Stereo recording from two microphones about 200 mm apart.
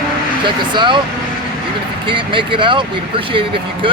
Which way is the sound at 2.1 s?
25° right (ahead or behind).